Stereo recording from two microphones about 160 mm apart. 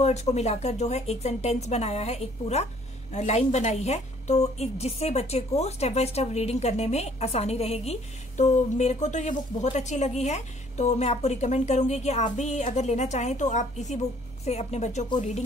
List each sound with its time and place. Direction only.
0.0 s a woman's voice: 45° left (ahead or behind)